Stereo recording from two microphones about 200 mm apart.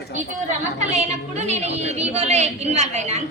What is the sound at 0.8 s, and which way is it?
A woman's voice, 35° right (ahead or behind).